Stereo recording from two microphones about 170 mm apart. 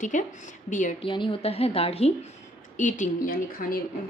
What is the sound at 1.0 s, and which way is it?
A woman's voice, 30° left (ahead or behind).